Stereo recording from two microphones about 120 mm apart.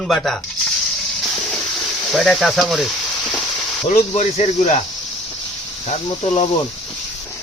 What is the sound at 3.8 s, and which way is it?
Speech, 60° left (ahead or behind).